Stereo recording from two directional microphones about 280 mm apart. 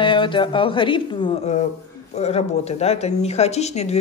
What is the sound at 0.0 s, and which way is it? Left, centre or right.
A woman's voice, centre.